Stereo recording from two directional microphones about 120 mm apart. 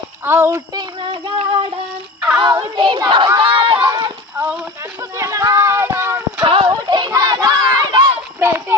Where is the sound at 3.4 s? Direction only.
45° right (ahead or behind).